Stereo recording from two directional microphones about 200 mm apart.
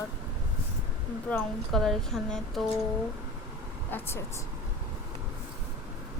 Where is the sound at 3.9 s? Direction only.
10° left (ahead or behind).